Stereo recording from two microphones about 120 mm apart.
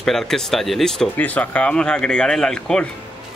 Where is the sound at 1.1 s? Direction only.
15° left (ahead or behind).